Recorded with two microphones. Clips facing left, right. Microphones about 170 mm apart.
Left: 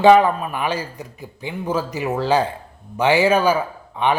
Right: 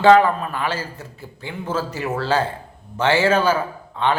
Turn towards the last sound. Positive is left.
turn(degrees=15)  # may be behind; listen again after turning